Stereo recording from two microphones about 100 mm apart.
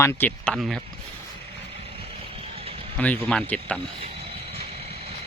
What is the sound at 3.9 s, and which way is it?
Vehicle, 75° right (ahead or behind).